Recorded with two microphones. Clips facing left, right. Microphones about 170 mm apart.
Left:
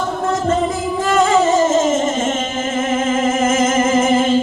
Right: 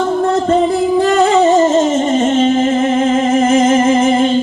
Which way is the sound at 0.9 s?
35° right (ahead or behind).